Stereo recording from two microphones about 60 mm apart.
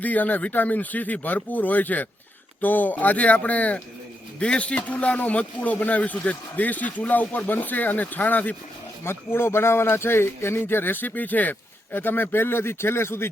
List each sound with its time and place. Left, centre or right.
0.0 s a man's voice: left
9.0 s speech: left